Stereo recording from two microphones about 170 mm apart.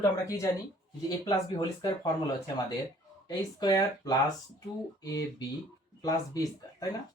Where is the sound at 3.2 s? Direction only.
20° left (ahead or behind).